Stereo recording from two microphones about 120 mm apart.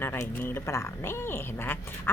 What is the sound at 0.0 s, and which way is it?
Speech, 20° left (ahead or behind).